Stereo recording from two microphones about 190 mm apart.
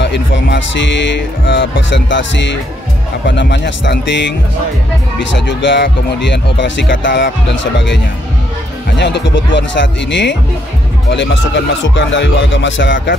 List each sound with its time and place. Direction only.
0.0 s speech: 65° left (ahead or behind)